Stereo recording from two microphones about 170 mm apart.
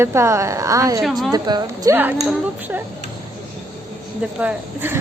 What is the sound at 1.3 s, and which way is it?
Speech, 20° right (ahead or behind).